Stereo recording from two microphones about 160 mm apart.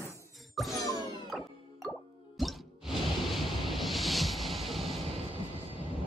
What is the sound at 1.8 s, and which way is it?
Plop, centre (ahead or behind).